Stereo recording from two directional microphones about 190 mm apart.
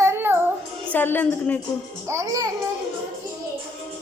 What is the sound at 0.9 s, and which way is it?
Speech, 10° left (ahead or behind).